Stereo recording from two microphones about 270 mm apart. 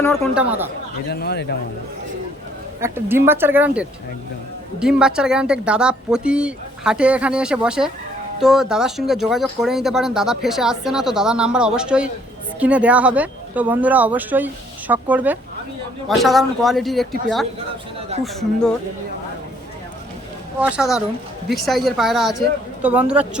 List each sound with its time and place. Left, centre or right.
1.1 s speech: left
2.8 s speech: centre
20.6 s speech: centre